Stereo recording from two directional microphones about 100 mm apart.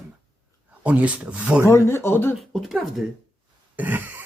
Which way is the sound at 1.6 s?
25° left (ahead or behind).